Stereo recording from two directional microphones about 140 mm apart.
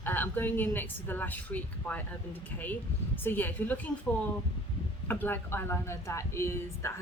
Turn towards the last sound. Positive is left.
turn(degrees=20)  # may be behind; listen again after turning